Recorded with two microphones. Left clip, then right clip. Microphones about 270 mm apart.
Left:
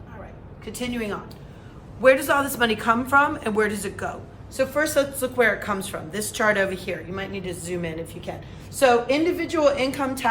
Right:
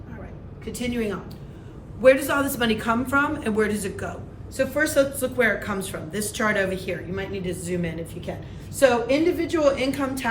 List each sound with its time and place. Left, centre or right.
0.6 s a woman's voice: centre